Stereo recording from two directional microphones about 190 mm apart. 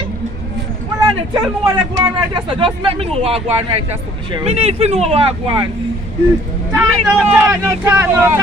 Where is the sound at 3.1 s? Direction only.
30° right (ahead or behind).